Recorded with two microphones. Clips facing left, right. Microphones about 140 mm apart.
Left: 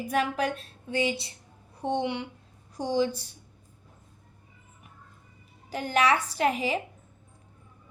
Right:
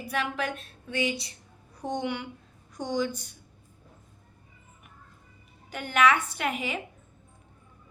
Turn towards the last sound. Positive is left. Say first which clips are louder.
# left 5 dB
turn(degrees=35)  # may be behind; listen again after turning